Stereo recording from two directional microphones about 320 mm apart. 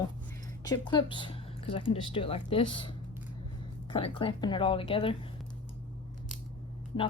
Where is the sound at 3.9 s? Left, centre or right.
Centre.